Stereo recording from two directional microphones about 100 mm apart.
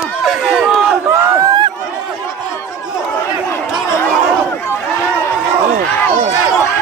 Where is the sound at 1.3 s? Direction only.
40° right (ahead or behind).